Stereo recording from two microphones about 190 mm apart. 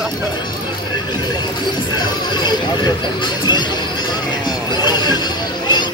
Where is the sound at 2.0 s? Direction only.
20° left (ahead or behind).